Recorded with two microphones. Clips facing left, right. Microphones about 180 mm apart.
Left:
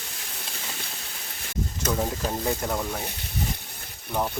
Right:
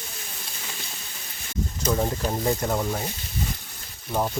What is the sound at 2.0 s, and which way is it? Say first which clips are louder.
Speech: right 2 dB; centre (ahead or behind).